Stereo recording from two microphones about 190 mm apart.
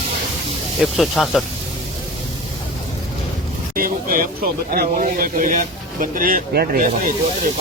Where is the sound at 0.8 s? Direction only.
Centre (ahead or behind).